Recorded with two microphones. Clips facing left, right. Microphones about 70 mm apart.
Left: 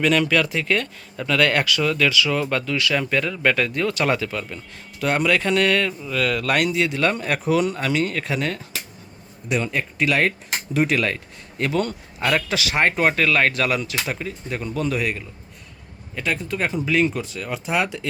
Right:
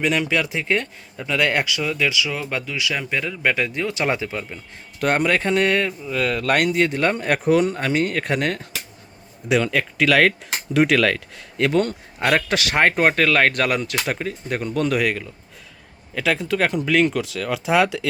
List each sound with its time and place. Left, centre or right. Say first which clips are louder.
0.0 s speech: left 2 dB; centre
4.9 s speech: right 1 dB; right
9.5 s speech: right 4 dB; right
11.7 s speech: right 3 dB; right
13.9 s speech: right 2 dB; right
14.8 s speech: right 3 dB; right
16.1 s speech: right 4 dB; right